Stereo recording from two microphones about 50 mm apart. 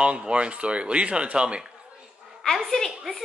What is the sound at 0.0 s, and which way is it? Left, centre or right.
Speech, right.